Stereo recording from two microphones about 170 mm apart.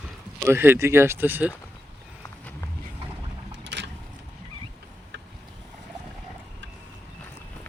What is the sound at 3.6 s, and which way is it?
Vehicle, 90° right.